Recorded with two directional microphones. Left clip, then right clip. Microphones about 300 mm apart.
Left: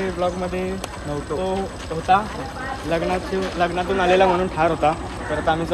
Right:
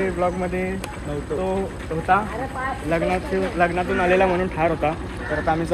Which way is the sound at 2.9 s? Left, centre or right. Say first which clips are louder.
Left 1 dB; centre.